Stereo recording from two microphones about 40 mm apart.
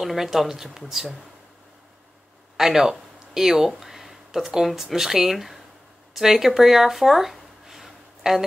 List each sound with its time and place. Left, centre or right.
0.0 s speech: centre
2.5 s speech: centre
6.1 s a sound: centre